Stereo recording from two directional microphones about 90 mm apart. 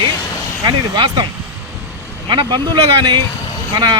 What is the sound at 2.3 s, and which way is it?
Speech, 50° right (ahead or behind).